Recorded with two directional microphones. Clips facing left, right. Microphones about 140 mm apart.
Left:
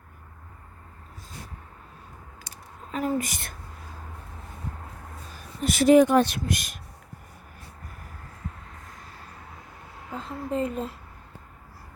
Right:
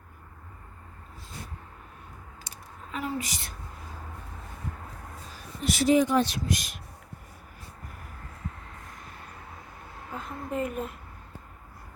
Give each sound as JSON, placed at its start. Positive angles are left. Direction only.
{"t": 2.9, "sound": "a woman's voice", "side_deg": 45}
{"t": 5.6, "sound": "speech", "side_deg": 55}
{"t": 10.1, "sound": "a woman's voice", "side_deg": 25}